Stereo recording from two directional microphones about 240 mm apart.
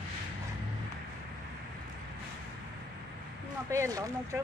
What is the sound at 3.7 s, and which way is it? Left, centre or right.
Speech, centre.